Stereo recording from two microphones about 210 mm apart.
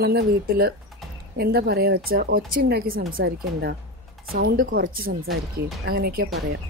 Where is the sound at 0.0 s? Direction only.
45° right (ahead or behind).